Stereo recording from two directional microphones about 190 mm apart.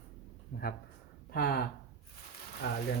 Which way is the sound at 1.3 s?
55° left (ahead or behind).